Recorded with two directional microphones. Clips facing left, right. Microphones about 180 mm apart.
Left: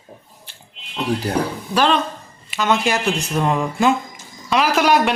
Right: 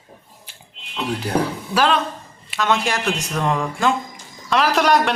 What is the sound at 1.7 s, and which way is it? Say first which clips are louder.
Speech: left 1 dB; 5° right (ahead or behind).